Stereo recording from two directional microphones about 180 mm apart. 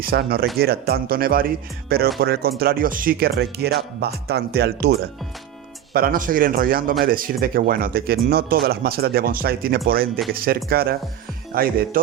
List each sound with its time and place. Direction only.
0.0 s a man's voice: 55° right (ahead or behind)